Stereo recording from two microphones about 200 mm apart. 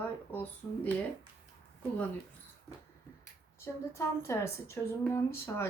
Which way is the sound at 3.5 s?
15° left (ahead or behind).